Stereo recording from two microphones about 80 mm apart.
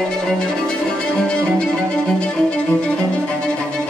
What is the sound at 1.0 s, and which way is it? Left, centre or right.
Music, centre.